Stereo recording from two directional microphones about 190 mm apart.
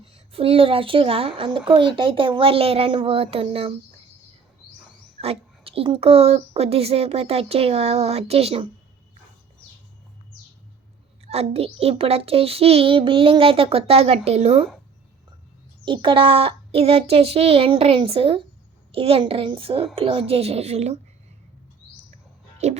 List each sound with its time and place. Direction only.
0.0 s a woman's voice: 30° right (ahead or behind)
5.2 s a child's voice: 30° right (ahead or behind)
11.3 s a child's voice: 30° right (ahead or behind)
15.8 s a child's voice: 25° right (ahead or behind)
22.5 s music: 35° right (ahead or behind)